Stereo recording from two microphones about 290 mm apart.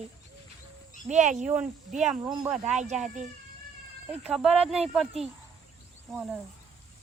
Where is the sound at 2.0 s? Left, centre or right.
Centre.